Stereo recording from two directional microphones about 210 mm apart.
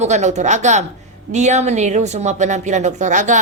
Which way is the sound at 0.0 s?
35° right (ahead or behind).